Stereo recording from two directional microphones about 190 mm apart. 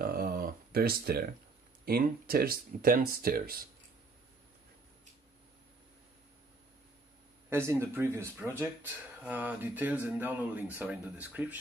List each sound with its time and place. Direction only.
0.0 s a sound: 50° right (ahead or behind)
1.9 s speech: 50° right (ahead or behind)
7.4 s speech: 15° right (ahead or behind)